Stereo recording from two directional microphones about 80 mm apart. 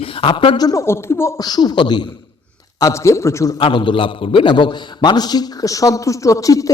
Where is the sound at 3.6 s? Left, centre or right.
Left.